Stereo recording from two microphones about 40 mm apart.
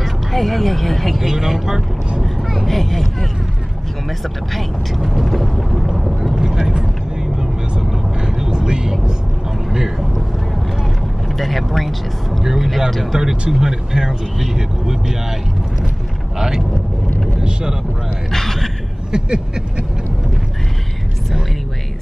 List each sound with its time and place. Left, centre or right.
0.0 s speech: centre
1.3 s speech: centre
2.2 s speech: centre
4.6 s vehicle: centre
6.4 s vehicle: centre
8.4 s vehicle: right
9.7 s vehicle: centre
11.3 s speech: centre
17.4 s speech: centre
18.3 s speech: centre
19.1 s a sound: centre